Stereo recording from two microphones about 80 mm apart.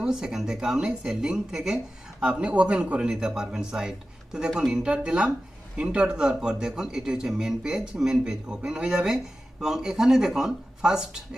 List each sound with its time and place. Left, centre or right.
0.0 s a man's voice: centre